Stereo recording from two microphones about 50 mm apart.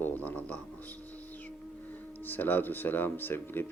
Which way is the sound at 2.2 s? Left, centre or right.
Left.